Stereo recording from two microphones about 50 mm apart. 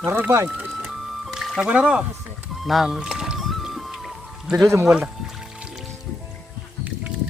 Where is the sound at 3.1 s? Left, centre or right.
Centre.